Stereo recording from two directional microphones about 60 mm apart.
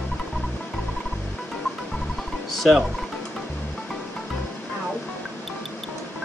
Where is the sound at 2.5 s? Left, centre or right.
Centre.